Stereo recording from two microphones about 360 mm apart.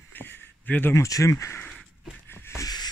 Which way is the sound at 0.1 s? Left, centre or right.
Centre.